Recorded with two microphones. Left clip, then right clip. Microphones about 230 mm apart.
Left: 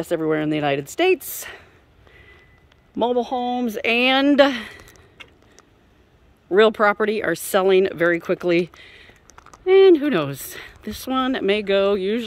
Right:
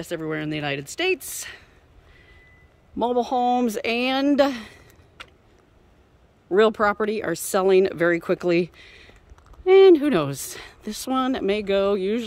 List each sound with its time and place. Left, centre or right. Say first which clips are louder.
0.0 s speech: left 7 dB; left
3.0 s speech: left 1 dB; centre
6.5 s speech: left 3 dB; centre